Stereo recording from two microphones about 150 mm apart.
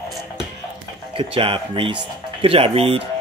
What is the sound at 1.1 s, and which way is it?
Speech, 35° right (ahead or behind).